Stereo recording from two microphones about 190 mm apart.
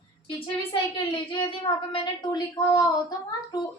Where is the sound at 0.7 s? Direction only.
25° left (ahead or behind).